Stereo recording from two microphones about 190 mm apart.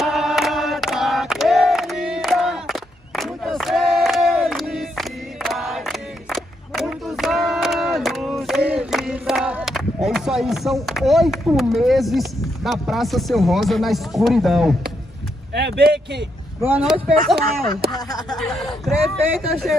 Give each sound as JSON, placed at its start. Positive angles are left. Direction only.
{"t": 0.0, "sound": "choir", "side_deg": 0}
{"t": 10.0, "sound": "speech", "side_deg": 0}
{"t": 15.5, "sound": "speech", "side_deg": -60}
{"t": 16.6, "sound": "speech", "side_deg": -5}
{"t": 17.9, "sound": "speech", "side_deg": 20}
{"t": 18.4, "sound": "speech", "side_deg": 0}